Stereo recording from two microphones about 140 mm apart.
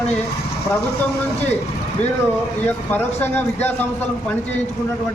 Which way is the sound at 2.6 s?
15° left (ahead or behind).